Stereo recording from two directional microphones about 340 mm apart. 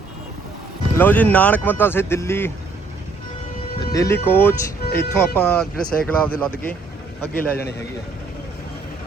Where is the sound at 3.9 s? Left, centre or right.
Centre.